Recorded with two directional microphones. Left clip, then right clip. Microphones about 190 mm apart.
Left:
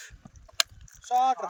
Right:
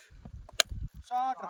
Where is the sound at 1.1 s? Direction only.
35° left (ahead or behind).